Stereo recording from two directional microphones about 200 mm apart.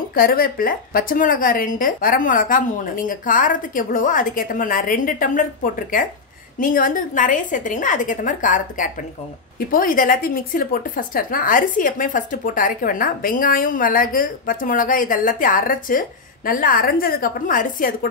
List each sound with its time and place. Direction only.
0.1 s a woman's voice: 45° left (ahead or behind)